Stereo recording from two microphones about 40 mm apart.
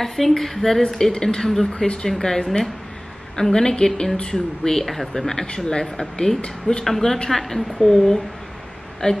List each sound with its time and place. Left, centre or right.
0.0 s a woman's voice: centre
1.7 s speech: left
2.0 s speech: centre
3.3 s speech: centre
4.7 s speech: centre; by 9.2 s left